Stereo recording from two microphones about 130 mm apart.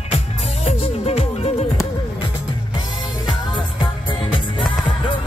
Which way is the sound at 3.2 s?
35° left (ahead or behind).